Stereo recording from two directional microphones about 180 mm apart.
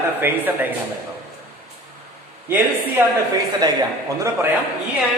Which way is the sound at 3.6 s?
20° right (ahead or behind).